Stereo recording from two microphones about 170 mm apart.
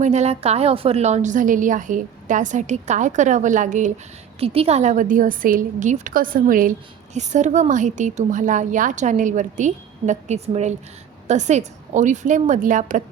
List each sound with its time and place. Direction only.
0.0 s a woman's voice: 40° right (ahead or behind)
4.4 s a woman's voice: 35° right (ahead or behind)